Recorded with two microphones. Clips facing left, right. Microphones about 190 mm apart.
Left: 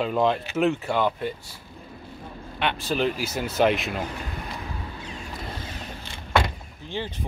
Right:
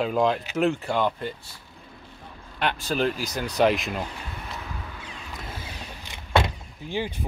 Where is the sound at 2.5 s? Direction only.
Centre (ahead or behind).